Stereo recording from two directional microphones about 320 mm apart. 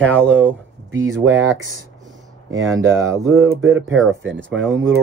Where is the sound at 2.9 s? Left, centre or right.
Centre.